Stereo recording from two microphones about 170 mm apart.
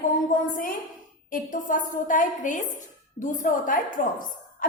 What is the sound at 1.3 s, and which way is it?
A woman's voice, 50° left (ahead or behind).